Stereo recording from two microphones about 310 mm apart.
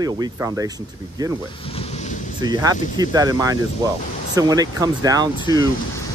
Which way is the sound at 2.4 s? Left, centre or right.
Centre.